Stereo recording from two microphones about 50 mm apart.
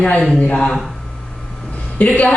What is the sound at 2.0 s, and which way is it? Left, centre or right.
Speech, left.